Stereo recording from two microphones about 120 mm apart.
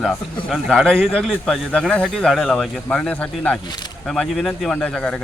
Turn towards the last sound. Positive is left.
turn(degrees=5)  # may be behind; listen again after turning